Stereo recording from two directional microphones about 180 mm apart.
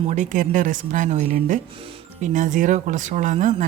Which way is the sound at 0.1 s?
45° right (ahead or behind).